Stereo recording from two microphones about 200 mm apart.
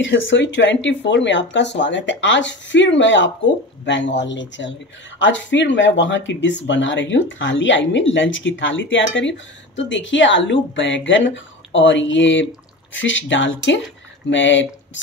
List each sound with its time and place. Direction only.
0.3 s speech: 65° left (ahead or behind)